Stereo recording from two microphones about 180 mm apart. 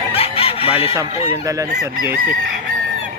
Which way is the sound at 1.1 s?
35° left (ahead or behind).